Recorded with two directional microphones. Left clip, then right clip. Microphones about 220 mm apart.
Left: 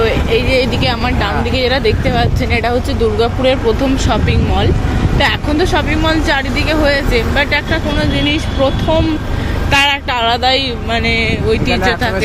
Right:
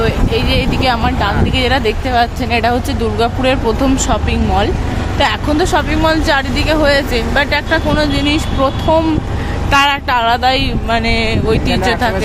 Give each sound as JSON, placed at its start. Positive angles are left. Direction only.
{"t": 0.0, "sound": "speech", "side_deg": -20}